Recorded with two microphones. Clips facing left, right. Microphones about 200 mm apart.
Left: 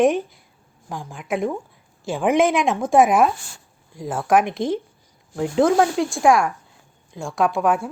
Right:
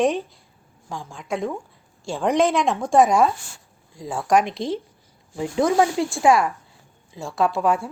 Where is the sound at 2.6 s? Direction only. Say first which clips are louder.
Left 1 dB; centre (ahead or behind).